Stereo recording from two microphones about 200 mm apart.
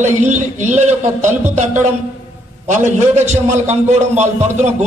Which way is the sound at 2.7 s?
40° right (ahead or behind).